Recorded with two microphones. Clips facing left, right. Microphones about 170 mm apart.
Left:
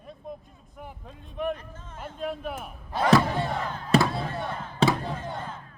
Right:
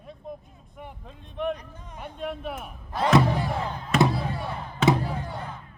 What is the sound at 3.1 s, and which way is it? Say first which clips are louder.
Crowd: right 1 dB; 20° right (ahead or behind).